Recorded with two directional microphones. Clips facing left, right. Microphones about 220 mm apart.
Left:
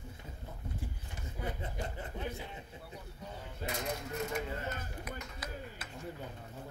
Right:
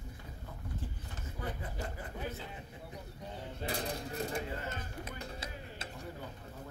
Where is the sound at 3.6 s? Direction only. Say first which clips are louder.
Even; 35° right (ahead or behind).